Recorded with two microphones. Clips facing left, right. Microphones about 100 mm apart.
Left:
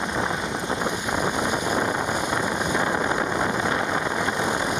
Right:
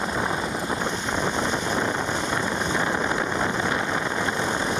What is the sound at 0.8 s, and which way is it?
Wind noise, 15° left (ahead or behind).